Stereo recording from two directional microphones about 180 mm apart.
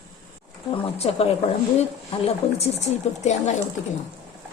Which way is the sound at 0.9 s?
35° left (ahead or behind).